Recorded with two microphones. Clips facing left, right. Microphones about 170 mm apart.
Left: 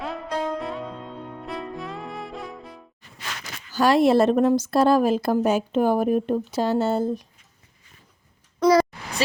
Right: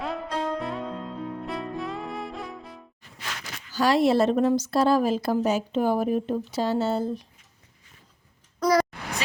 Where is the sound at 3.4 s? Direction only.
50° left (ahead or behind).